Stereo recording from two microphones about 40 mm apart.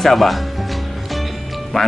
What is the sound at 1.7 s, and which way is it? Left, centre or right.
Speech, centre.